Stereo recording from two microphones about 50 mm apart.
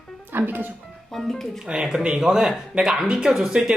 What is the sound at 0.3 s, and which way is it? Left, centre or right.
Speech, right.